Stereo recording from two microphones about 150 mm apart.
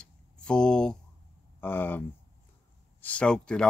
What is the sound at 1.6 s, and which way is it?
Speech, 15° left (ahead or behind).